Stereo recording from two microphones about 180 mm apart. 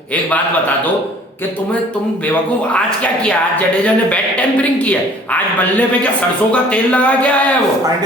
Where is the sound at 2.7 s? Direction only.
5° left (ahead or behind).